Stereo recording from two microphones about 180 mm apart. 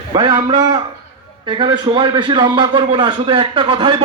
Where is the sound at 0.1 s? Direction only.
25° right (ahead or behind).